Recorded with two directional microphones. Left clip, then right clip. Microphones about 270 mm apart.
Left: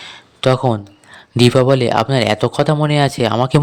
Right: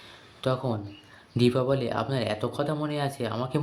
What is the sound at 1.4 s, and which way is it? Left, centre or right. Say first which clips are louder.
Speech: left 13 dB; left.